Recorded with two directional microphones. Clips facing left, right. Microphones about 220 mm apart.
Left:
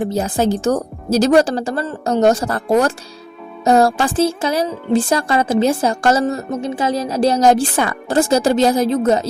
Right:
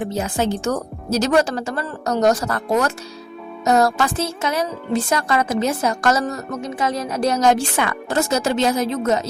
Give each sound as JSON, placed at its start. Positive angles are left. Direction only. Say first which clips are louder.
{"t": 0.2, "sound": "speech", "louder": "left 3 dB", "side_deg": 35}